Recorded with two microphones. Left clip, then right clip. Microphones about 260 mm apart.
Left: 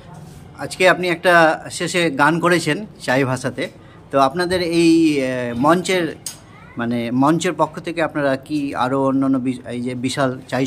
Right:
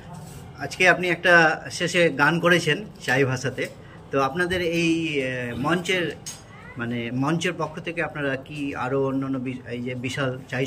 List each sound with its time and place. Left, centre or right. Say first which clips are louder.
0.6 s speech: left 4 dB; centre